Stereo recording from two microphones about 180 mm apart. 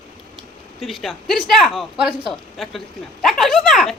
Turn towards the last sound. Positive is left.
turn(degrees=0)  # may be behind; listen again after turning